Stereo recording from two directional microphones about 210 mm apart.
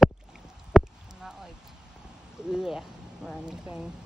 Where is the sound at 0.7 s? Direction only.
Centre (ahead or behind).